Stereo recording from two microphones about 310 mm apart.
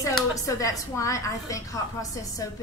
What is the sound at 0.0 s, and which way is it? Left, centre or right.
A woman's voice, centre.